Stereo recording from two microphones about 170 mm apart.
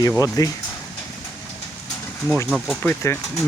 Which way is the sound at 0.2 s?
20° left (ahead or behind).